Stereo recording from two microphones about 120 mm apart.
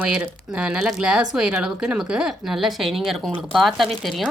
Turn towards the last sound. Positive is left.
turn(degrees=0)  # may be behind; listen again after turning